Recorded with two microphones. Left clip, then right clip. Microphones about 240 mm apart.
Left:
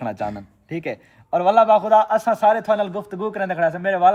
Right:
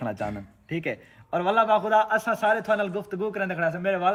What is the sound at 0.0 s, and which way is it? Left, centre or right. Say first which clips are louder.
A man's voice: left 5 dB; left.